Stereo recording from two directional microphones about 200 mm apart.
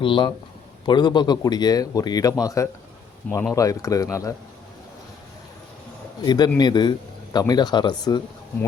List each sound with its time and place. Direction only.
0.0 s a man's voice: 25° left (ahead or behind)
6.2 s a man's voice: 20° left (ahead or behind)